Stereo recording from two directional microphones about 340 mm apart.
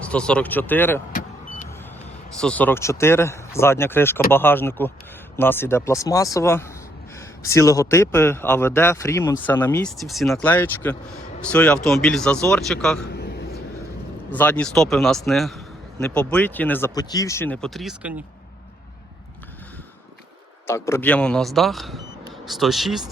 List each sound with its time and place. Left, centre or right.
0.0 s a man's voice: centre
2.3 s a man's voice: centre
13.1 s a sound: left
14.3 s a man's voice: centre
20.7 s speech: centre